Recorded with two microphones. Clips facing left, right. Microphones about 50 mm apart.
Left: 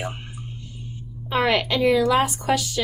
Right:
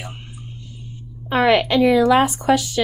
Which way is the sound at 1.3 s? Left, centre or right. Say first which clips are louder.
Right 5 dB; right.